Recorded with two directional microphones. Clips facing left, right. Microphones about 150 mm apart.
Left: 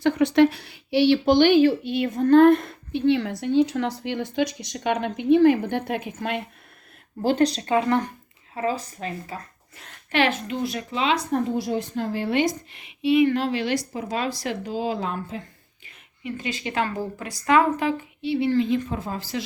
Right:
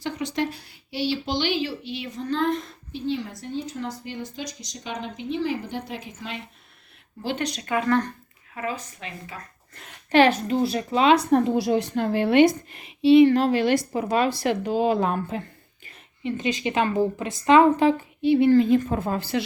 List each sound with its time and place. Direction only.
0.0 s speech: 60° left (ahead or behind)
7.2 s speech: 40° left (ahead or behind); by 8.1 s 20° left (ahead or behind)
8.5 s speech: 35° left (ahead or behind)
10.1 s a child's voice: 35° right (ahead or behind)
10.9 s a woman's voice: 50° right (ahead or behind)
11.3 s a woman's voice: 90° right; by 12.5 s 65° right (ahead or behind)
12.7 s a woman's voice: 35° right (ahead or behind); by 15.4 s 55° right (ahead or behind)
16.2 s a woman's voice: 20° right (ahead or behind)
18.2 s a woman's voice: 50° right (ahead or behind)